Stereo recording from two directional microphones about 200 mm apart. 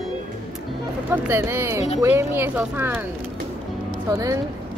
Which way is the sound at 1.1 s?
10° right (ahead or behind).